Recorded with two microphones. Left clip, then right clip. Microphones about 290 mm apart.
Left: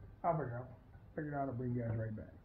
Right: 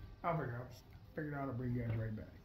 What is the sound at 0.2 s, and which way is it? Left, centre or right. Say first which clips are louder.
Speech: left 3 dB; right.